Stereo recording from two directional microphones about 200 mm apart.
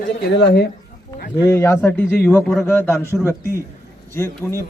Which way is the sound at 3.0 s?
10° right (ahead or behind).